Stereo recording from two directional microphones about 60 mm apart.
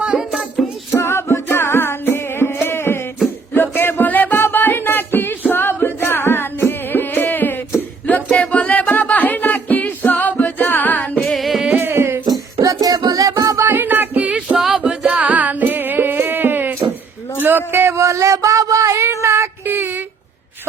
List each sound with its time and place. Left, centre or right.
0.0 s music: centre
0.9 s music: left
7.8 s a sound: left
11.3 s music: centre
11.8 s music: right
12.3 s music: right
13.7 s music: right
14.3 s music: centre
15.0 s music: right
17.4 s a sound: right
17.9 s a sound: right
19.6 s a sound: right